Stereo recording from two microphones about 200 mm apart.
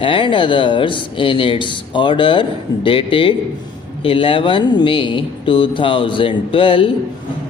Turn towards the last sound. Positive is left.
turn(degrees=25)  # may be behind; listen again after turning